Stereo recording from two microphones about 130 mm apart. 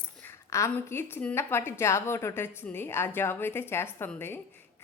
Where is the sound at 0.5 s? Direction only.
20° left (ahead or behind).